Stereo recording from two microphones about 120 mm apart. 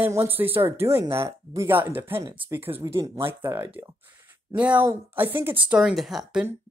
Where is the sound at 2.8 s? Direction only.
30° right (ahead or behind).